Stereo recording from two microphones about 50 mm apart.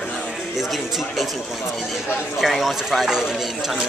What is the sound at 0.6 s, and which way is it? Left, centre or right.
Speech, centre.